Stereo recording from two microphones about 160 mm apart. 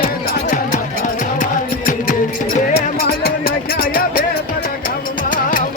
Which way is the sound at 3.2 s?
70° left (ahead or behind).